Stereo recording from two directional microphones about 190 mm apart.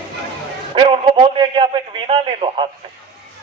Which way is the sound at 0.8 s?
30° right (ahead or behind).